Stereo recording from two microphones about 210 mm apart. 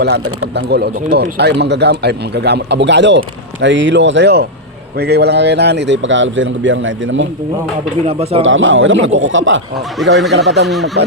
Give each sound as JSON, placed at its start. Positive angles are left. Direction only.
{"t": 0.5, "sound": "speech", "side_deg": -50}
{"t": 8.0, "sound": "speech", "side_deg": -30}
{"t": 8.4, "sound": "a man's voice", "side_deg": -65}
{"t": 9.7, "sound": "speech", "side_deg": 0}